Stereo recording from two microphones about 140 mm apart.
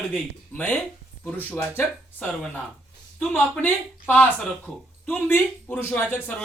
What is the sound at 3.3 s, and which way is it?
Speech, 10° left (ahead or behind).